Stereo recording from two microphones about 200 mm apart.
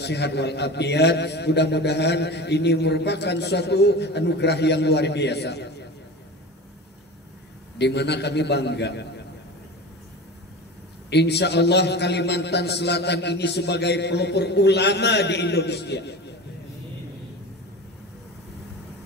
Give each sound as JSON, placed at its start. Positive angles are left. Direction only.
{"t": 0.0, "sound": "a man's voice", "side_deg": 55}
{"t": 7.8, "sound": "a man's voice", "side_deg": 60}
{"t": 11.1, "sound": "a man's voice", "side_deg": 55}